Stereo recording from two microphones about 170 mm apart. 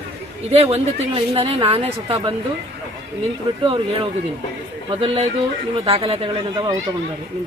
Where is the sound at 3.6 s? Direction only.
30° right (ahead or behind).